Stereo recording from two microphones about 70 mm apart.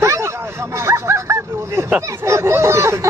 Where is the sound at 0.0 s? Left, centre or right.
Right.